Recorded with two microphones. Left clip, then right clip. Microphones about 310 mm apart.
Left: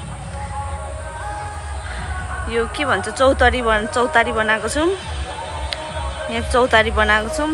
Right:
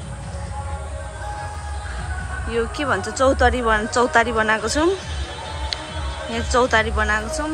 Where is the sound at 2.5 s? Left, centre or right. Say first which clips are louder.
Left 2 dB; centre.